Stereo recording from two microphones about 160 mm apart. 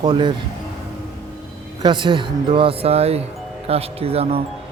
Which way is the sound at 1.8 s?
30° right (ahead or behind).